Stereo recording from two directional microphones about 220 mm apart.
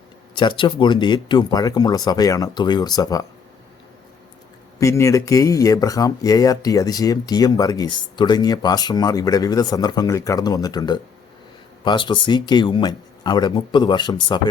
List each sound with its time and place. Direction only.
0.3 s speech: 20° left (ahead or behind)
4.8 s speech: 15° left (ahead or behind)